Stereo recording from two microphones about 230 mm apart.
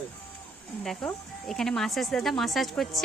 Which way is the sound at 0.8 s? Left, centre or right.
Centre.